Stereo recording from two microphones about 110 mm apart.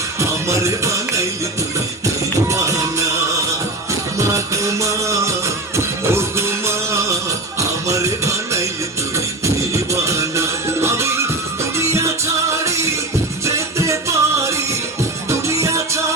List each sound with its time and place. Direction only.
0.2 s music: 25° right (ahead or behind)
2.5 s music: 30° right (ahead or behind)
4.2 s music: 30° right (ahead or behind)